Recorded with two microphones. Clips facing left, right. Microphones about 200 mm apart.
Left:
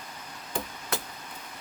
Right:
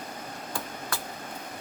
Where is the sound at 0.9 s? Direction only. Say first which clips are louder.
Left 4 dB; 20° left (ahead or behind).